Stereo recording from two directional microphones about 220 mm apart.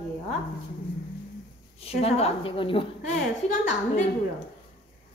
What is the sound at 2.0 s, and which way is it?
A woman's voice, 30° left (ahead or behind).